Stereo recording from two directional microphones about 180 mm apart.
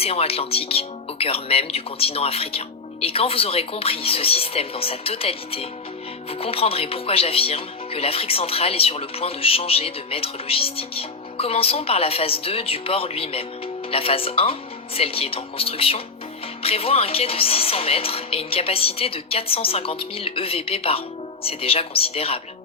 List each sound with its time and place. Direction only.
0.0 s speech: 35° left (ahead or behind)